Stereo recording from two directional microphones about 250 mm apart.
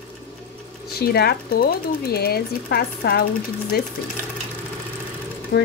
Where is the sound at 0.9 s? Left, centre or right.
Left.